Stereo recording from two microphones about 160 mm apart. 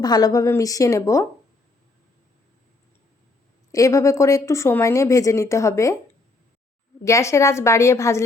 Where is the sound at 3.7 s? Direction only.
20° left (ahead or behind).